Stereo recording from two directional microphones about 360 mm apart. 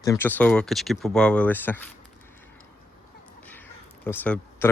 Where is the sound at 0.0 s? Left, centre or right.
Centre.